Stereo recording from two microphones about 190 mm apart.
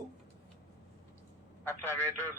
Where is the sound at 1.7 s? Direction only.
10° left (ahead or behind).